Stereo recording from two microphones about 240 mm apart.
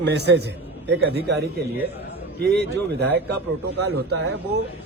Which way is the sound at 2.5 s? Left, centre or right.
Right.